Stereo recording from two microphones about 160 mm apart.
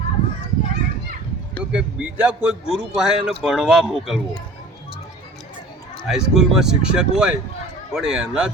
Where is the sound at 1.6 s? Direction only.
5° right (ahead or behind).